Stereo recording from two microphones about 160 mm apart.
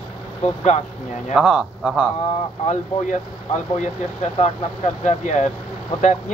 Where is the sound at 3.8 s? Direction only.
45° left (ahead or behind).